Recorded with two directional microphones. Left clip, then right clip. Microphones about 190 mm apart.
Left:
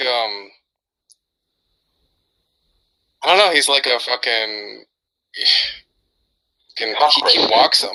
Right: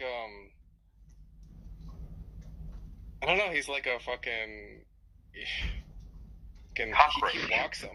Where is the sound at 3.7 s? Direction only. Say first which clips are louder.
Left 16 dB; 55° left (ahead or behind).